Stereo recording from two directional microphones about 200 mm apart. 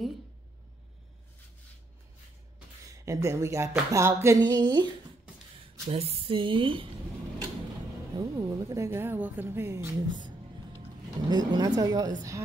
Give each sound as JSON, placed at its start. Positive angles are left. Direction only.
{"t": 2.9, "sound": "speech", "side_deg": -15}
{"t": 8.2, "sound": "speech", "side_deg": -20}